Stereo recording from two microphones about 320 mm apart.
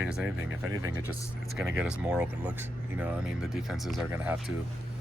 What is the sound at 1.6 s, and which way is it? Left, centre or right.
Speech, centre.